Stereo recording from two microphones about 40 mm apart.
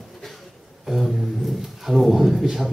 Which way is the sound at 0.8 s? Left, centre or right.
Centre.